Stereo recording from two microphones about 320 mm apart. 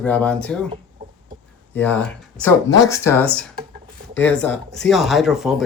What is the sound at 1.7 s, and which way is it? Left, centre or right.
Speech, centre.